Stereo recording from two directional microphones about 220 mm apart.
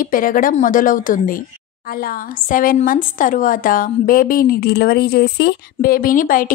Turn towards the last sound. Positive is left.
turn(degrees=40)  # may be behind; listen again after turning